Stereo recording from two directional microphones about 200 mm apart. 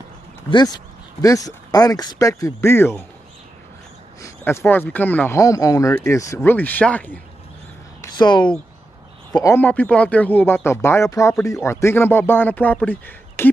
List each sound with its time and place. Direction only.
0.5 s speech: 20° left (ahead or behind)
4.2 s speech: 15° left (ahead or behind)
8.0 s speech: 20° left (ahead or behind)
9.4 s speech: 10° left (ahead or behind)